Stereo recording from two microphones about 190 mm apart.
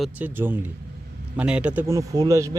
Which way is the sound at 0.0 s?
10° right (ahead or behind).